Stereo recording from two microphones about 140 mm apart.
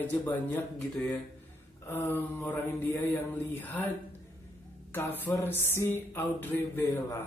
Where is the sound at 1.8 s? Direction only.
15° left (ahead or behind).